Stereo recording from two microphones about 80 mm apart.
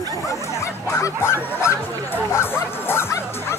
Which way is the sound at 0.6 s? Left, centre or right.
Left.